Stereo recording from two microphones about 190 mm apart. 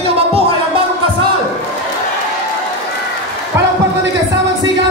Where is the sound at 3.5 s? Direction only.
15° right (ahead or behind).